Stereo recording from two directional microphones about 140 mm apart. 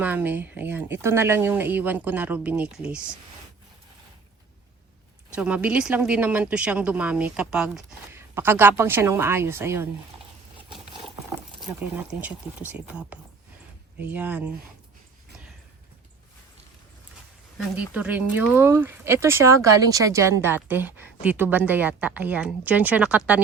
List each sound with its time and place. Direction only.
0.0 s speech: 10° right (ahead or behind)
5.3 s speech: 10° right (ahead or behind)
8.1 s speech: 15° right (ahead or behind)
11.8 s speech: 10° right (ahead or behind)
17.7 s speech: 10° right (ahead or behind)